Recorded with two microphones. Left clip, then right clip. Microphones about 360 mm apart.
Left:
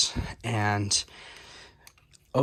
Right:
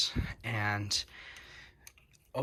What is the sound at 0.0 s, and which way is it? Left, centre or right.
Speech, centre.